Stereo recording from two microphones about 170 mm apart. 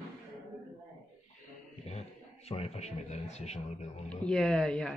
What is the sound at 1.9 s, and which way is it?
A man's voice, 40° left (ahead or behind).